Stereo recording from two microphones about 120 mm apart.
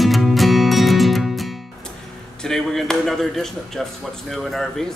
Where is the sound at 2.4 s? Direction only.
5° left (ahead or behind).